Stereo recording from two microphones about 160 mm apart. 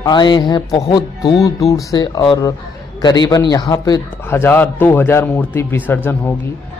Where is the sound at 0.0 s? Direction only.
25° left (ahead or behind).